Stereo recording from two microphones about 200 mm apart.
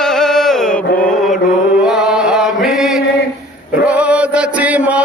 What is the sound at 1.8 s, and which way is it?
Chant, 5° right (ahead or behind).